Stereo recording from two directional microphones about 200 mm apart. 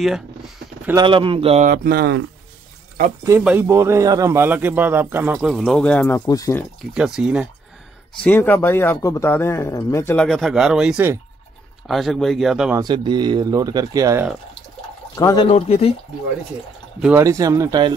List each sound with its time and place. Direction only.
1.0 s speech: 25° right (ahead or behind)
1.7 s speech: 50° right (ahead or behind)
3.3 s a man's voice: 10° right (ahead or behind); by 6.6 s 15° left (ahead or behind)
6.9 s speech: 5° right (ahead or behind)
8.2 s speech: 10° left (ahead or behind)
12.7 s speech: 20° right (ahead or behind)
15.1 s speech: 20° left (ahead or behind)
15.5 s speech: 30° left (ahead or behind)
17.0 s a man's voice: 15° right (ahead or behind)